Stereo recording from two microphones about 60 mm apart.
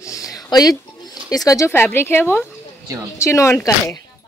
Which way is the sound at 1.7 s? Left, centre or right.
Left.